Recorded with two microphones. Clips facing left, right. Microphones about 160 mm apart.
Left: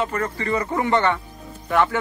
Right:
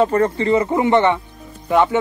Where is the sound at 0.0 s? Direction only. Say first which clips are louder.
Right 9 dB; 30° right (ahead or behind).